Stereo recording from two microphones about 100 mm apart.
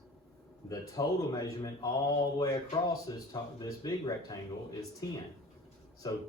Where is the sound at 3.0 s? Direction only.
40° left (ahead or behind).